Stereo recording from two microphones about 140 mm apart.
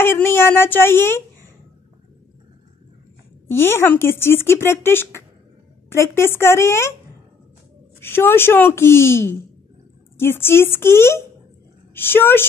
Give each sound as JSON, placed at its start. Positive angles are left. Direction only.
{"t": 0.0, "sound": "speech", "side_deg": 15}
{"t": 3.4, "sound": "speech", "side_deg": 15}
{"t": 8.0, "sound": "speech", "side_deg": 15}